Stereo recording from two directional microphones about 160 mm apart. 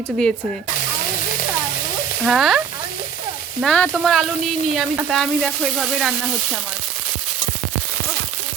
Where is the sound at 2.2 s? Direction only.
Centre (ahead or behind).